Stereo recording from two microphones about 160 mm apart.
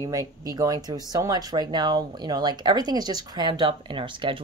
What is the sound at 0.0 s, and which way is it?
Speech, 20° right (ahead or behind).